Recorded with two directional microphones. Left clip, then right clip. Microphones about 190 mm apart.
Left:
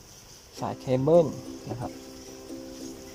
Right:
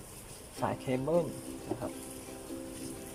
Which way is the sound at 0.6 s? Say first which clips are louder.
Left 6 dB; 20° left (ahead or behind).